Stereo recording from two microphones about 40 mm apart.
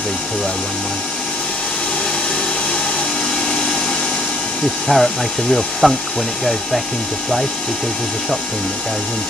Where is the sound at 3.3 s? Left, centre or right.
Centre.